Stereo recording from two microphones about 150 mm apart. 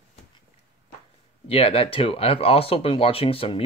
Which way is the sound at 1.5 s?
40° left (ahead or behind).